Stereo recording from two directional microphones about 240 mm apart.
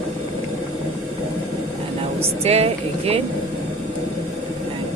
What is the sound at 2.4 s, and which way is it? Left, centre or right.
Speech, right.